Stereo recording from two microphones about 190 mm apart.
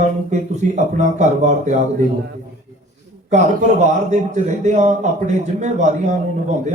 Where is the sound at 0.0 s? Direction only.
40° right (ahead or behind).